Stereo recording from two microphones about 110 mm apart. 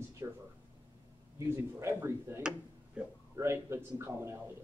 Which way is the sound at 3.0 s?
10° right (ahead or behind).